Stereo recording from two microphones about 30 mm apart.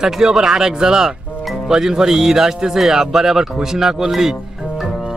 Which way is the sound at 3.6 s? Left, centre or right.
Centre.